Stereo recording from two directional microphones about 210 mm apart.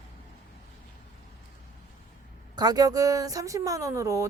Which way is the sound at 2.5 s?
20° right (ahead or behind).